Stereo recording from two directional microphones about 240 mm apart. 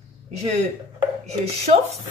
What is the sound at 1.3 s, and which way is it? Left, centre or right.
Speech, right.